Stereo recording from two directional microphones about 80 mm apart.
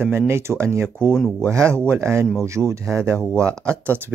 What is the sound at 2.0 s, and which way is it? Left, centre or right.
Speech, right.